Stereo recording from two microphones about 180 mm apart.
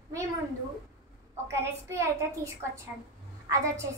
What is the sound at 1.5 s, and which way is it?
A woman's voice, 15° right (ahead or behind).